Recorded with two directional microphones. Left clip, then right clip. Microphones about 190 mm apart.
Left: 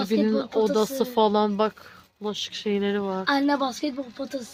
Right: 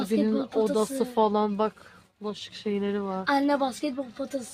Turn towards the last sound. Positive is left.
turn(degrees=20)  # may be behind; listen again after turning